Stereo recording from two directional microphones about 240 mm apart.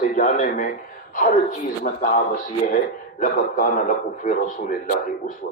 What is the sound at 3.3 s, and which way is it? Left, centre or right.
A man's voice, left.